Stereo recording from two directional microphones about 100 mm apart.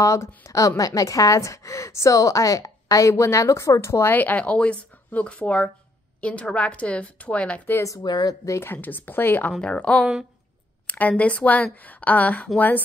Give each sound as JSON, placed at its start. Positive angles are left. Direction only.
{"t": 0.0, "sound": "a woman's voice", "side_deg": 30}
{"t": 7.7, "sound": "a woman's voice", "side_deg": 30}
{"t": 8.0, "sound": "speech", "side_deg": 45}
{"t": 8.5, "sound": "a woman's voice", "side_deg": 25}